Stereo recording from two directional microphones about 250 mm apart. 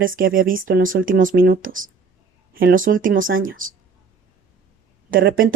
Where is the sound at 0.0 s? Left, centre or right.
Right.